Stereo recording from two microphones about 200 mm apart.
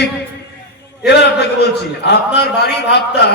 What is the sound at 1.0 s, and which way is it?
A man's voice, 55° left (ahead or behind).